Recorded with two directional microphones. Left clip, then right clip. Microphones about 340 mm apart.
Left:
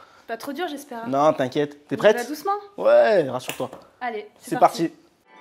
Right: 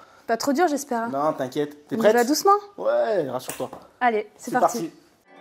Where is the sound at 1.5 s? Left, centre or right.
Left.